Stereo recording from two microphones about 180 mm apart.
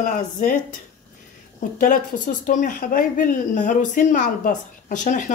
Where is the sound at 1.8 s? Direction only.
45° left (ahead or behind).